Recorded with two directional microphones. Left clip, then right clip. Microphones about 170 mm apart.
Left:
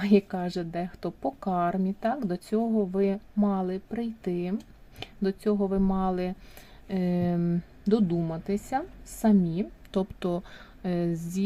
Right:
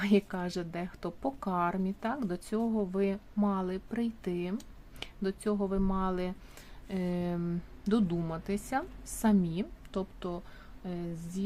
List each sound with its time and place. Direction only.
0.0 s a woman's voice: 10° left (ahead or behind)
10.0 s speech: 25° left (ahead or behind)